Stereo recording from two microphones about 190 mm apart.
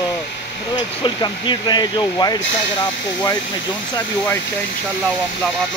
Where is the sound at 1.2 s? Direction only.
20° left (ahead or behind).